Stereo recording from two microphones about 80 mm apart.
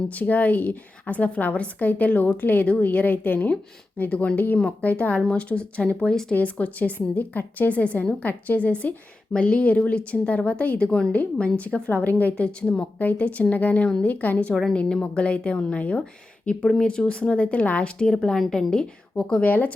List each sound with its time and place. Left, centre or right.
0.1 s a woman's voice: centre